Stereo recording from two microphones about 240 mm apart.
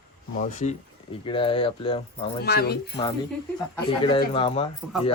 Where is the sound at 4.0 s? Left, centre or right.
Centre.